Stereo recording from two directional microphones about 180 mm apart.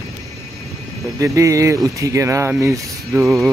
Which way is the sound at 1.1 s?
15° right (ahead or behind).